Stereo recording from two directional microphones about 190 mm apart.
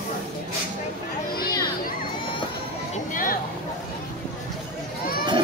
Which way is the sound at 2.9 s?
45° left (ahead or behind).